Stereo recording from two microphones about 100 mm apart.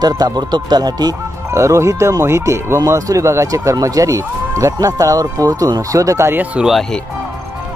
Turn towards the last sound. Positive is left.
turn(degrees=-5)  # may be behind; listen again after turning